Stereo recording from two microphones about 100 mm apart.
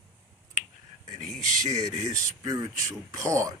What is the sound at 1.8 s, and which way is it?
Speech, 40° right (ahead or behind).